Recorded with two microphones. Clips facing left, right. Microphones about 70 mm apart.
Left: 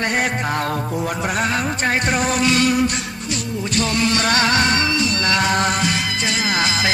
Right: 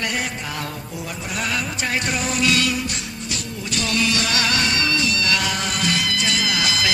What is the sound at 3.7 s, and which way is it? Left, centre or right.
Music, left.